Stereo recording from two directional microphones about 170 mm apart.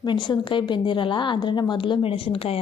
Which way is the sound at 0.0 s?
25° left (ahead or behind).